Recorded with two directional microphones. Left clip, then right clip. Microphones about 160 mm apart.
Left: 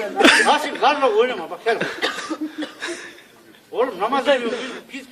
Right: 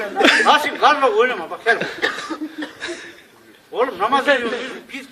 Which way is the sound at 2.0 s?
60° left (ahead or behind).